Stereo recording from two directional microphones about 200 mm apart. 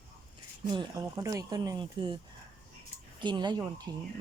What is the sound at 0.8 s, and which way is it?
Speech, 15° right (ahead or behind).